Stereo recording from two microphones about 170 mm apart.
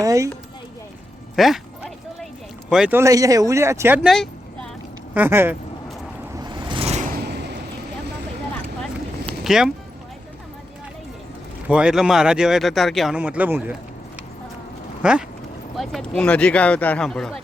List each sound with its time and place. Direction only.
0.0 s speech: 20° right (ahead or behind)
1.4 s speech: centre (ahead or behind)
2.6 s speech: 5° right (ahead or behind)
3.0 s speech: 20° right (ahead or behind)
4.1 s a sound: centre (ahead or behind)
5.1 s speech: 10° right (ahead or behind)
6.3 s vehicle: 25° right (ahead or behind)
7.1 s a sound: 75° right (ahead or behind)
9.2 s a sound: centre (ahead or behind)
11.7 s speech: 5° right (ahead or behind)
15.8 s speech: 5° left (ahead or behind)